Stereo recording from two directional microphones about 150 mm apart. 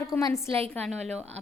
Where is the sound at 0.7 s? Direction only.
10° left (ahead or behind).